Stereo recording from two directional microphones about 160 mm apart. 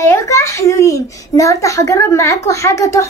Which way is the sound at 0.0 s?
20° left (ahead or behind).